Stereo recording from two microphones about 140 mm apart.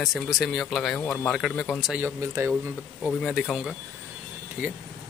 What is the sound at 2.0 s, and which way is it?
Speech, 15° right (ahead or behind).